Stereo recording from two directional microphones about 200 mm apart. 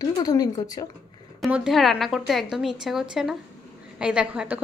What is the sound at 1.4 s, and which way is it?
A woman's voice, centre (ahead or behind).